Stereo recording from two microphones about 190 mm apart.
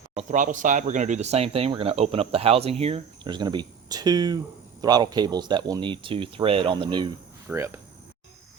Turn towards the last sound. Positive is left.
turn(degrees=-15)  # may be behind; listen again after turning